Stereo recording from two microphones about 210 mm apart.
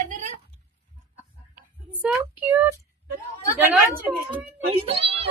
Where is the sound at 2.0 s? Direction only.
5° right (ahead or behind).